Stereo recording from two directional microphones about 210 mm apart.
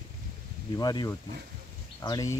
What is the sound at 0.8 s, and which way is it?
Speech, 20° left (ahead or behind).